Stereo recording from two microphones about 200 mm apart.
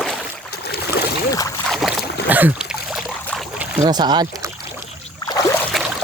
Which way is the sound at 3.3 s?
Centre (ahead or behind).